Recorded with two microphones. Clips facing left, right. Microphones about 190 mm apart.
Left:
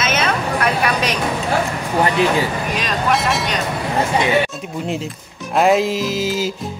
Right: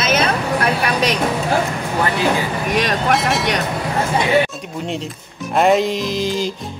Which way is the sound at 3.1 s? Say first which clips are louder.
Left 2 dB; centre (ahead or behind).